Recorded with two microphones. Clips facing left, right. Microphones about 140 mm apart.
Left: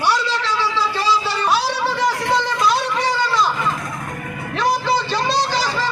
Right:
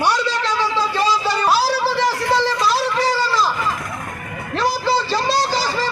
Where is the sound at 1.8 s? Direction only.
35° right (ahead or behind).